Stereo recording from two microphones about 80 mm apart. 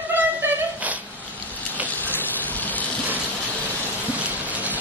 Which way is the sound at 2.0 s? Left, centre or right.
Left.